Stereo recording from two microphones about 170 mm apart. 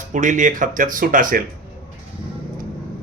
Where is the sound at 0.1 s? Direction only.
45° right (ahead or behind).